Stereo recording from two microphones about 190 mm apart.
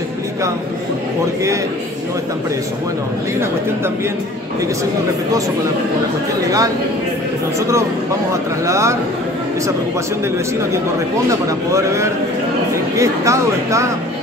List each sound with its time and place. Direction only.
8.6 s speech: 15° right (ahead or behind)
11.2 s speech: 15° right (ahead or behind)